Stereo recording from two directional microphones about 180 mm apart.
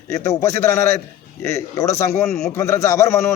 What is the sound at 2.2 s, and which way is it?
Speech, 5° left (ahead or behind).